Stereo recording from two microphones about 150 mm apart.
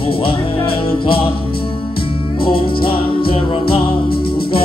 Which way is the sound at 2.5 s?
35° left (ahead or behind).